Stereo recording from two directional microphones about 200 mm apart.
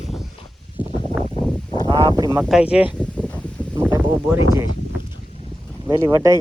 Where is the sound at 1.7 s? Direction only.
20° left (ahead or behind).